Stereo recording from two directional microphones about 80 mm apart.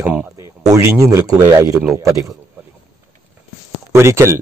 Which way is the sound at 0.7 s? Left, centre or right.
Right.